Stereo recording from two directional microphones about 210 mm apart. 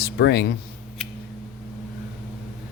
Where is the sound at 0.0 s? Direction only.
50° left (ahead or behind).